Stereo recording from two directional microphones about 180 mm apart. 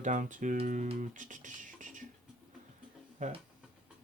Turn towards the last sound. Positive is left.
turn(degrees=-45)  # may be behind; listen again after turning